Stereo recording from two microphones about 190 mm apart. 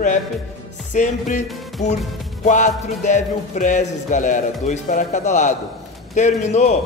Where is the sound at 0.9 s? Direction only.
40° left (ahead or behind).